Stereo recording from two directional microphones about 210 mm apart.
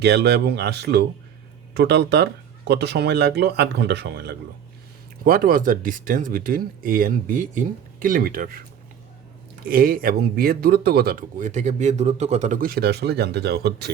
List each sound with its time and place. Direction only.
0.0 s speech: 55° right (ahead or behind)
9.6 s speech: 45° right (ahead or behind)